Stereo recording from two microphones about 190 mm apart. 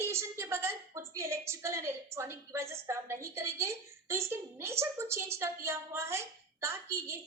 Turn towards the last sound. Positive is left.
turn(degrees=-15)  # may be behind; listen again after turning